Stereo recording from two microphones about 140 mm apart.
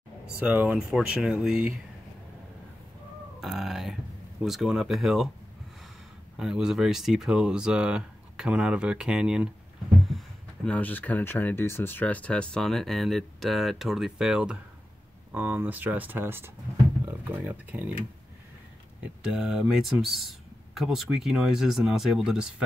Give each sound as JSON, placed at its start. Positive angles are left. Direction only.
{"t": 0.4, "sound": "speech", "side_deg": -10}
{"t": 3.3, "sound": "speech", "side_deg": 0}
{"t": 6.3, "sound": "speech", "side_deg": -5}
{"t": 19.2, "sound": "speech", "side_deg": -5}